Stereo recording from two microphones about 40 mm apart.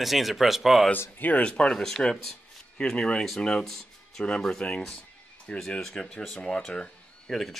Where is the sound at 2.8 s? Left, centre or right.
Left.